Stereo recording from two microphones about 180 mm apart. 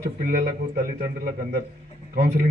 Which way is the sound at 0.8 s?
50° right (ahead or behind).